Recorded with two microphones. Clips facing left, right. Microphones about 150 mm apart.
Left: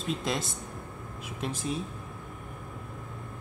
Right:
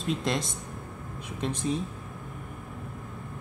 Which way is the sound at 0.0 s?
Centre (ahead or behind).